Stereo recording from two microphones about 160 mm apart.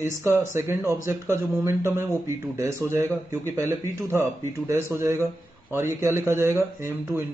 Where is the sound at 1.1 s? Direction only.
15° right (ahead or behind).